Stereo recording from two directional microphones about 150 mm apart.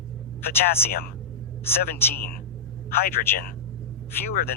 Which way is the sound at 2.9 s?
75° left (ahead or behind).